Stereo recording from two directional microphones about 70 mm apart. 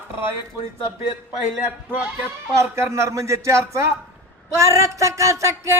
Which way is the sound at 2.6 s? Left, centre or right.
Right.